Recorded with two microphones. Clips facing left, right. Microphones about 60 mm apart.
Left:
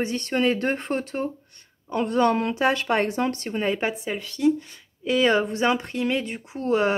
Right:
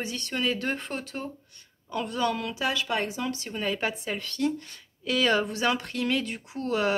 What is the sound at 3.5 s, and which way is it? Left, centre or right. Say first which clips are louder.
Speech: left 5 dB; left.